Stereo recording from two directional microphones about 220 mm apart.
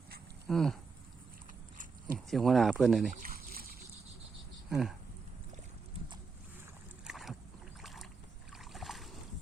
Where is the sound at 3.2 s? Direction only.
40° right (ahead or behind).